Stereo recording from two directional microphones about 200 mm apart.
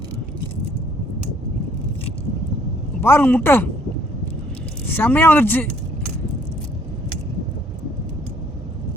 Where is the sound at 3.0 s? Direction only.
10° left (ahead or behind).